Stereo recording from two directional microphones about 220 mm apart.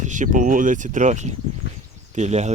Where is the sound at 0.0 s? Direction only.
35° right (ahead or behind).